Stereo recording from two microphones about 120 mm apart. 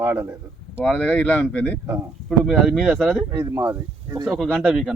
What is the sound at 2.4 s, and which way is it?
Speech, centre (ahead or behind).